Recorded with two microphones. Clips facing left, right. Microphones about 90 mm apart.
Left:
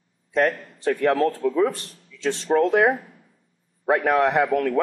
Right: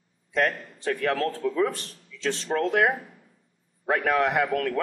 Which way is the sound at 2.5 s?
15° left (ahead or behind).